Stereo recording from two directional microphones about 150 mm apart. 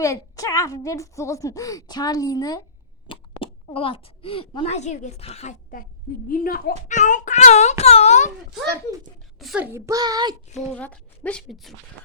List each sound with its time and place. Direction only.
0.0 s a woman's voice: 20° left (ahead or behind)
3.1 s speech: 35° left (ahead or behind)
6.2 s speech: 70° left (ahead or behind)
6.8 s speech: 55° left (ahead or behind)
9.4 s a child's voice: centre (ahead or behind)
9.7 s a child's voice: 20° right (ahead or behind)
10.8 s speech: 10° left (ahead or behind)